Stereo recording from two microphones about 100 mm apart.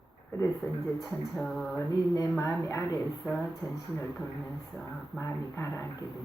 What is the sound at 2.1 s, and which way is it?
Speech, 35° left (ahead or behind).